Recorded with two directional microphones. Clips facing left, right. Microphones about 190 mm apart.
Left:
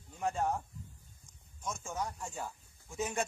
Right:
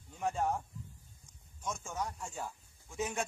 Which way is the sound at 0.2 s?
Centre (ahead or behind).